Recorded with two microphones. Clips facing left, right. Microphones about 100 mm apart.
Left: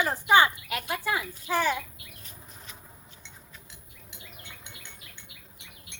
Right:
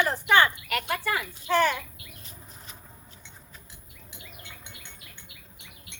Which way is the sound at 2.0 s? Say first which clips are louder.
Right 1 dB; centre (ahead or behind).